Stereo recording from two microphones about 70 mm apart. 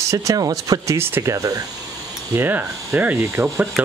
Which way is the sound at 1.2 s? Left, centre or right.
Right.